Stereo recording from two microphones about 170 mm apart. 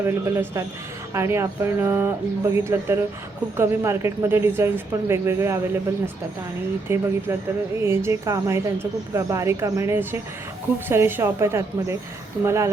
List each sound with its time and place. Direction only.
0.0 s speech: 15° right (ahead or behind)
6.8 s speech: 15° right (ahead or behind)